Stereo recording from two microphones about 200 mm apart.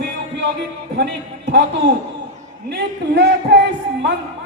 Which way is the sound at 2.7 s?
55° right (ahead or behind).